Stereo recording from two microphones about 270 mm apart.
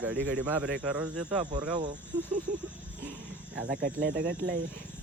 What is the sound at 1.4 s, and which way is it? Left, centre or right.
Speech, right.